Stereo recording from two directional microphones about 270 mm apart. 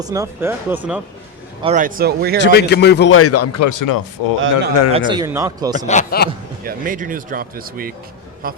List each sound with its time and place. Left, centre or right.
0.0 s speech: centre
1.6 s speech: right
2.4 s speech: left
4.4 s speech: right
4.9 s speech: centre
5.7 s a man's voice: left
6.7 s speech: right